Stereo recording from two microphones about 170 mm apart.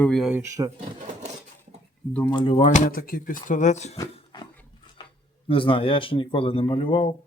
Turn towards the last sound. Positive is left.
turn(degrees=30)  # may be behind; listen again after turning